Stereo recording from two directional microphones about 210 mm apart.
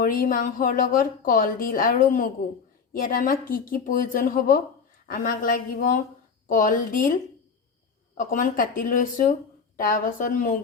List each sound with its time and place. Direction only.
0.0 s a woman's voice: 40° left (ahead or behind)
8.1 s a woman's voice: 40° left (ahead or behind)